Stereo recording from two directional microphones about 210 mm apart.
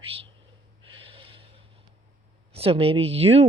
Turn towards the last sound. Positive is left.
turn(degrees=-30)  # may be behind; listen again after turning